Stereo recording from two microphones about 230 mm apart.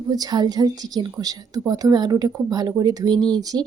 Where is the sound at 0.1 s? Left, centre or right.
Centre.